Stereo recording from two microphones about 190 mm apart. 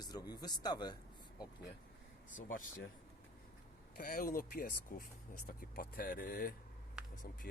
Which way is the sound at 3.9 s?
50° left (ahead or behind).